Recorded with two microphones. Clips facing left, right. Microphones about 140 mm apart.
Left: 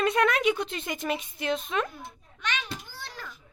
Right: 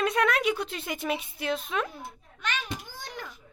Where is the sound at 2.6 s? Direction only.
15° right (ahead or behind).